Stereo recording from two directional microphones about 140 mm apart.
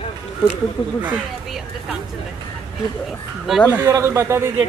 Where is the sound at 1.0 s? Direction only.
10° right (ahead or behind).